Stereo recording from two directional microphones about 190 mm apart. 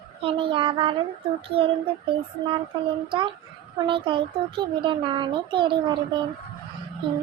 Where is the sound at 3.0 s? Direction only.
25° right (ahead or behind).